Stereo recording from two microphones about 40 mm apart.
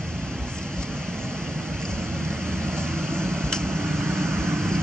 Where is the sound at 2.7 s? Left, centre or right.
Centre.